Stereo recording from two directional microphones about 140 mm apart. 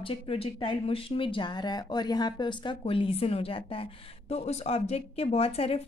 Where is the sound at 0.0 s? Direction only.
40° left (ahead or behind).